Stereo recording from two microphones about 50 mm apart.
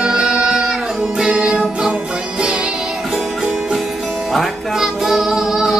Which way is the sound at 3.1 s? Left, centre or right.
Centre.